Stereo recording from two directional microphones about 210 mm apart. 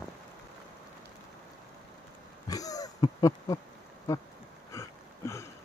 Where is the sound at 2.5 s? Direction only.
15° left (ahead or behind).